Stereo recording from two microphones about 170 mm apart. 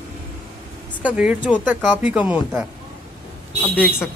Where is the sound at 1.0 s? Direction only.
5° right (ahead or behind).